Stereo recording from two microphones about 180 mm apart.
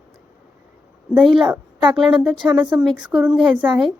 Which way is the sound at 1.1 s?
5° right (ahead or behind).